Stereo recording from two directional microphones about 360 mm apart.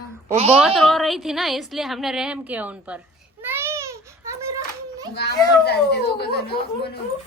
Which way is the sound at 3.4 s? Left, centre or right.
Centre.